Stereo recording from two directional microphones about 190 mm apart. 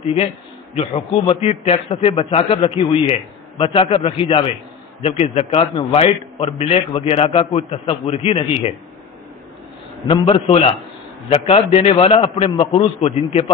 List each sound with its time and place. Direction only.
0.0 s a man's voice: 30° left (ahead or behind)
10.0 s a man's voice: 30° left (ahead or behind)